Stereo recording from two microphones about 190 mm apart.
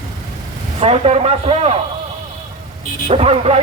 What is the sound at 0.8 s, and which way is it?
Speech, 30° right (ahead or behind).